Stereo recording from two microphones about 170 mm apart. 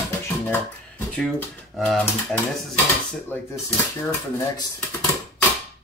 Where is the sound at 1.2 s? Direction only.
5° left (ahead or behind).